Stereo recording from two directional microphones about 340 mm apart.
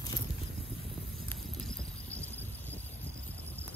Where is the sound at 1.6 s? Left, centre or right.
Centre.